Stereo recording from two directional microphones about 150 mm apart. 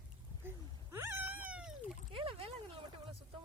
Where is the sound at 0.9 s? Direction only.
15° right (ahead or behind).